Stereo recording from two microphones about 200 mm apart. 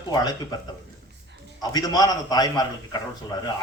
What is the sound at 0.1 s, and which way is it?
Speech, 20° left (ahead or behind).